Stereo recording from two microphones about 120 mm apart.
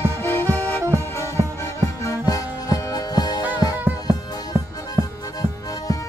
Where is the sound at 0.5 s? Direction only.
15° left (ahead or behind); by 3.4 s 35° left (ahead or behind).